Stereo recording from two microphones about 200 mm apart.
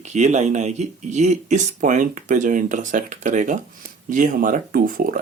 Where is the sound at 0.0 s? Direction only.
35° right (ahead or behind).